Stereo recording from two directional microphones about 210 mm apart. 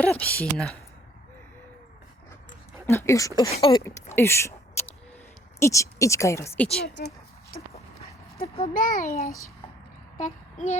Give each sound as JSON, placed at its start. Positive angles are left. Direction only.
{"t": 0.0, "sound": "speech", "side_deg": 5}
{"t": 2.8, "sound": "speech", "side_deg": 10}
{"t": 5.5, "sound": "speech", "side_deg": 15}
{"t": 6.8, "sound": "speech", "side_deg": 55}
{"t": 8.4, "sound": "a child's voice", "side_deg": 25}
{"t": 10.2, "sound": "a sound", "side_deg": 35}